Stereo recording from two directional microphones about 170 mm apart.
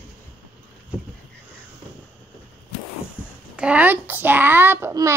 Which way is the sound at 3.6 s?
5° right (ahead or behind).